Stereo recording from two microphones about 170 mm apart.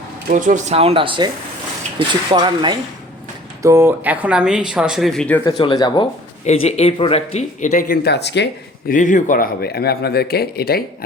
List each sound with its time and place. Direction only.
0.3 s speech: 50° right (ahead or behind); by 5.4 s 5° left (ahead or behind)
5.5 s speech: 25° left (ahead or behind)
6.4 s speech: 40° left (ahead or behind)
8.0 s speech: 85° left
8.9 s a man's voice: 50° left (ahead or behind); by 10.8 s 65° left (ahead or behind)